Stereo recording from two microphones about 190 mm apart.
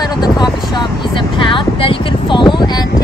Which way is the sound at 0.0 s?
20° left (ahead or behind).